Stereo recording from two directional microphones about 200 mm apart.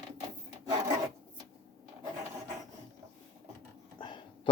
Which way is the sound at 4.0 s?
25° left (ahead or behind).